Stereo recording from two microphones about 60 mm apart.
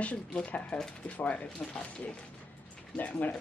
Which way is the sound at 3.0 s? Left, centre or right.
Left.